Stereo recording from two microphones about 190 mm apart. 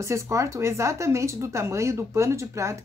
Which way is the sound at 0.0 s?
15° right (ahead or behind).